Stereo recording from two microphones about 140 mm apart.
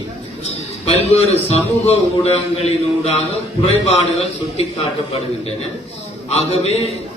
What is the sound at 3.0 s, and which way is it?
A man's voice, 45° left (ahead or behind).